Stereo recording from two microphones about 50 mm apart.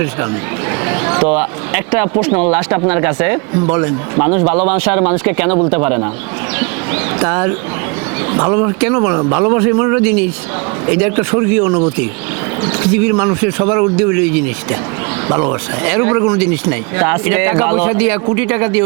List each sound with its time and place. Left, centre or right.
0.9 s speech: right